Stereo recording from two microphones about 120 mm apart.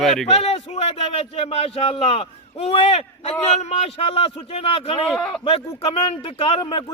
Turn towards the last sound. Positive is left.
turn(degrees=45)  # may be behind; listen again after turning